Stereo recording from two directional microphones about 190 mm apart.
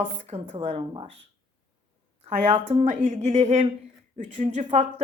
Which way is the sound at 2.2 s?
35° right (ahead or behind).